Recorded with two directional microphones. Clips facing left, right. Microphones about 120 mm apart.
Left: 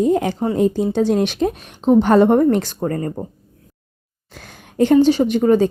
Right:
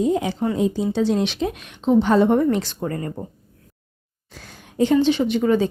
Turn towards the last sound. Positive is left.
turn(degrees=40)  # may be behind; listen again after turning